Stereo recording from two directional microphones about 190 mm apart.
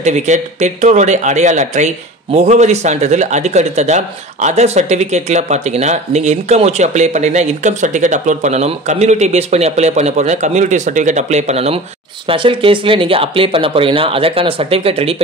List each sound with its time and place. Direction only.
0.0 s speech: 35° right (ahead or behind)